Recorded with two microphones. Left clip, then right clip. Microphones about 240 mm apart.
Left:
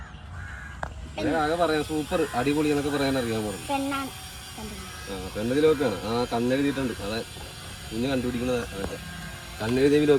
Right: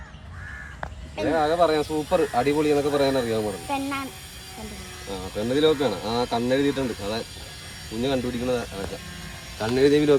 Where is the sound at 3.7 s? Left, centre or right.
Centre.